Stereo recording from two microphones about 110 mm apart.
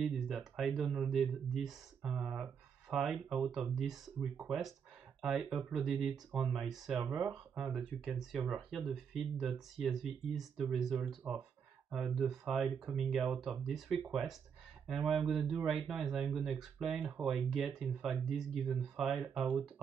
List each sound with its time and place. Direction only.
0.0 s speech: 5° right (ahead or behind)
7.0 s speech: 15° right (ahead or behind)
7.5 s speech: 5° right (ahead or behind)